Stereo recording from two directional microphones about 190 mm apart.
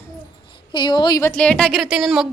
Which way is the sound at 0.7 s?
25° left (ahead or behind).